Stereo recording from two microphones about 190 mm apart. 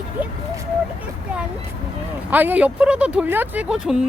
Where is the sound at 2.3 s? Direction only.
10° right (ahead or behind).